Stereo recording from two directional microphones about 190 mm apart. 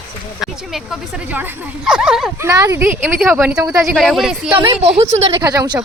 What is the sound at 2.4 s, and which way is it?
Speech, 15° right (ahead or behind).